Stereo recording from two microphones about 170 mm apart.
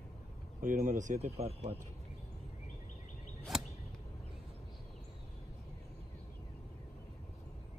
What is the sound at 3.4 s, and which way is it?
Arrow, centre (ahead or behind).